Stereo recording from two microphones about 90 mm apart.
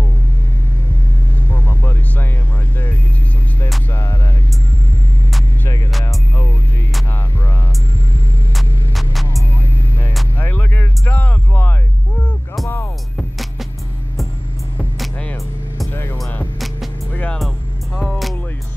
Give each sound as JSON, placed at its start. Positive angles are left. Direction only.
{"t": 1.5, "sound": "vehicle", "side_deg": 20}
{"t": 3.9, "sound": "music", "side_deg": 30}
{"t": 6.0, "sound": "music", "side_deg": 30}
{"t": 8.5, "sound": "hum", "side_deg": 0}
{"t": 9.6, "sound": "music", "side_deg": 20}
{"t": 10.3, "sound": "a sound", "side_deg": 20}
{"t": 15.9, "sound": "music", "side_deg": 20}
{"t": 16.5, "sound": "music", "side_deg": 0}
{"t": 17.1, "sound": "music", "side_deg": 15}
{"t": 17.9, "sound": "music", "side_deg": 5}